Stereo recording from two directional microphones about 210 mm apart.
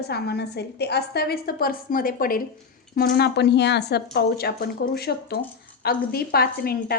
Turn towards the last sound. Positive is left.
turn(degrees=45)  # may be behind; listen again after turning